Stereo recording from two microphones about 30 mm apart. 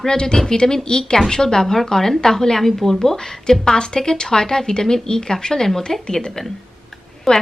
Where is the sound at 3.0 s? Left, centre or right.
Centre.